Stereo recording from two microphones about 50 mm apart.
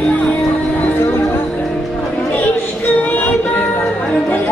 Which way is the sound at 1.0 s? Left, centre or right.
Left.